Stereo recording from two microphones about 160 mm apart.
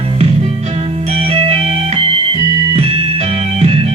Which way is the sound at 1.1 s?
40° right (ahead or behind).